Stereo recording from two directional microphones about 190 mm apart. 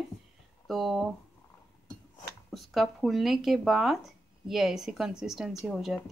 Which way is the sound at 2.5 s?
Centre (ahead or behind).